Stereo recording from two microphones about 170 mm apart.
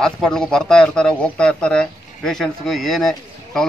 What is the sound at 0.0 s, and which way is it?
Speech, 5° left (ahead or behind).